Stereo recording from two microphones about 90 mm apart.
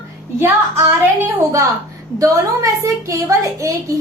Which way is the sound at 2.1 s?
40° right (ahead or behind).